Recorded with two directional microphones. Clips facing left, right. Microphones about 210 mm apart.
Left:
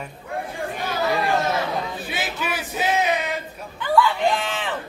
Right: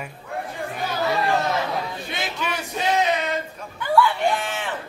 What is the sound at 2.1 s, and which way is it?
Music, 5° left (ahead or behind).